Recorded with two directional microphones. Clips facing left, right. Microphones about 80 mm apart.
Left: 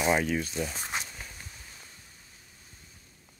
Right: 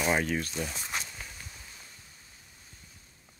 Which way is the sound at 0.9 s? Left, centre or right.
Left.